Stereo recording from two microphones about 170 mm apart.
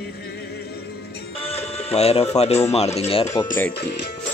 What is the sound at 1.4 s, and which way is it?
Speech, 35° left (ahead or behind).